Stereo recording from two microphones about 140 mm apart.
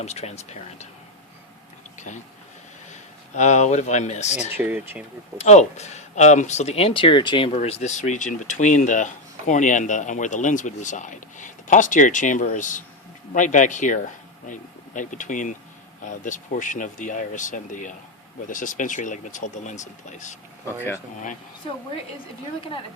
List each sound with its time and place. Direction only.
0.0 s speech: 50° left (ahead or behind)
2.0 s a sound: 55° left (ahead or behind)
2.9 s speech: 55° left (ahead or behind)
4.4 s speech: 10° right (ahead or behind)
5.4 s speech: 55° left (ahead or behind)